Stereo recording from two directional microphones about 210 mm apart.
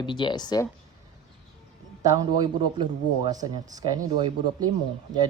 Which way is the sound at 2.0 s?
15° right (ahead or behind).